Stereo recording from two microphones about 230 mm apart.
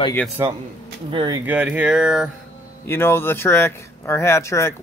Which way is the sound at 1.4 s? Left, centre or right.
Centre.